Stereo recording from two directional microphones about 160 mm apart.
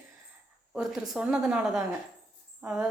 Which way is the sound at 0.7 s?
5° right (ahead or behind).